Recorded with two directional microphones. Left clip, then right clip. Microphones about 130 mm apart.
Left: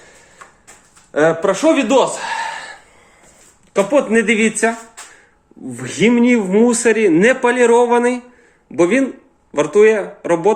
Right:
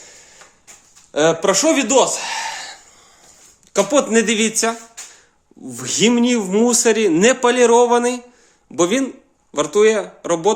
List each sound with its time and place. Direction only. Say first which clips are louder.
1.1 s speech: left 1 dB; 35° right (ahead or behind)
7.2 s speech: left 1 dB; 40° right (ahead or behind)
7.5 s speech: left 1 dB; 25° right (ahead or behind)